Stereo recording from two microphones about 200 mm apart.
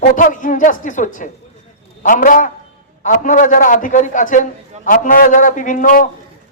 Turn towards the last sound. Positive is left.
turn(degrees=40)  # may be behind; listen again after turning